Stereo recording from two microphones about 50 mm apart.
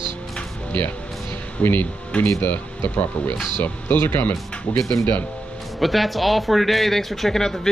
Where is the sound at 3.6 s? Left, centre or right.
Left.